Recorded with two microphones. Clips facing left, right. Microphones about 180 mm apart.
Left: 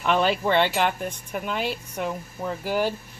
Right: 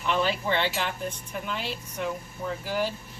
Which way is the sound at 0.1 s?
60° left (ahead or behind).